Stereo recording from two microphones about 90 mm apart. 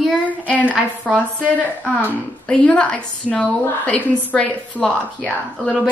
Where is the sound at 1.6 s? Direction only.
20° left (ahead or behind).